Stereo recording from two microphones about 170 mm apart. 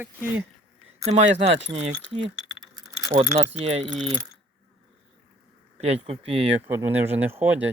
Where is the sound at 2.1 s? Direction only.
25° right (ahead or behind).